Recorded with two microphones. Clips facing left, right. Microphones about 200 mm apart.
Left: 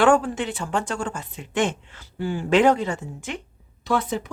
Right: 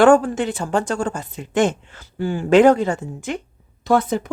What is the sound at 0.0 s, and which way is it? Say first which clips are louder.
Speech: right 5 dB; 45° right (ahead or behind).